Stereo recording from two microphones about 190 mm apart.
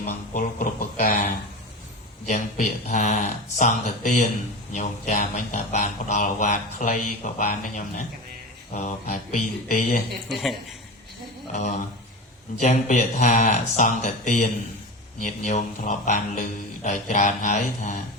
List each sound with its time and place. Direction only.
0.0 s speech: 45° left (ahead or behind)
2.3 s speech: 40° left (ahead or behind)
10.2 s speech: centre (ahead or behind)
11.5 s speech: 40° left (ahead or behind)